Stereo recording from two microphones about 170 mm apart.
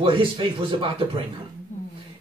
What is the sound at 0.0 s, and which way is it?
Speech, 30° right (ahead or behind).